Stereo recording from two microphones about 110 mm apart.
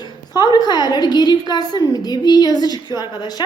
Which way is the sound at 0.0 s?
40° left (ahead or behind).